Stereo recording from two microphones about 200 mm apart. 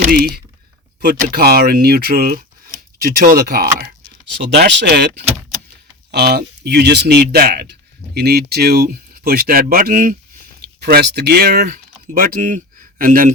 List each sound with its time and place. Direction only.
0.0 s speech: 40° right (ahead or behind)
10.8 s speech: 55° right (ahead or behind)